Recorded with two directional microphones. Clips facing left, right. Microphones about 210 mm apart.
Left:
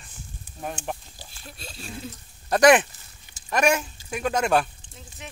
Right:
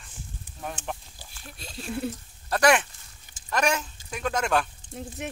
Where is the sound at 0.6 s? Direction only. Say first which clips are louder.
Left 3 dB; 10° left (ahead or behind).